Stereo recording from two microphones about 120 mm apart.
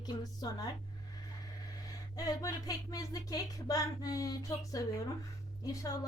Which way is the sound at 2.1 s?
30° left (ahead or behind).